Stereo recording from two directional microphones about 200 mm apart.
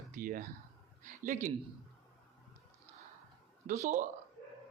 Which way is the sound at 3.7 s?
35° right (ahead or behind).